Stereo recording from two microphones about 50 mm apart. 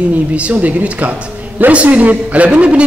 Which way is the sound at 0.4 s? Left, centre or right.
Right.